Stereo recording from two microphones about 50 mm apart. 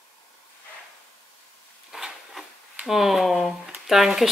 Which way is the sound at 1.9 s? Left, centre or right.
Centre.